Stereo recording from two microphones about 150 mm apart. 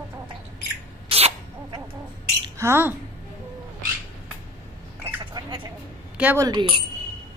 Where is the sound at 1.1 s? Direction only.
40° right (ahead or behind).